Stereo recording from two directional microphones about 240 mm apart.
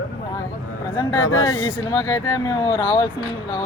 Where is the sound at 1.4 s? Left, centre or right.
Centre.